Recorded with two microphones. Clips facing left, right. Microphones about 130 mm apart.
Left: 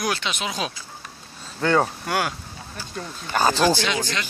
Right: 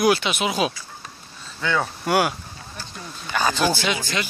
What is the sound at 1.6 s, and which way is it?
Speech, 45° left (ahead or behind).